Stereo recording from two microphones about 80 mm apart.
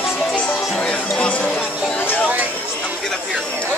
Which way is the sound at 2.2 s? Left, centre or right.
Centre.